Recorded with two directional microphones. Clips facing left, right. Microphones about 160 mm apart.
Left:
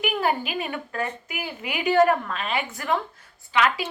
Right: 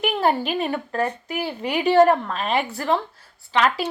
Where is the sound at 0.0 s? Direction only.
35° right (ahead or behind).